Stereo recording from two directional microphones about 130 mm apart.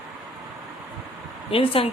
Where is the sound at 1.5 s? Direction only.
45° left (ahead or behind).